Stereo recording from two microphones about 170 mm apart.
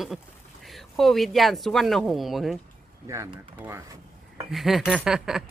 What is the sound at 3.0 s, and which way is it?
Speech, 15° right (ahead or behind).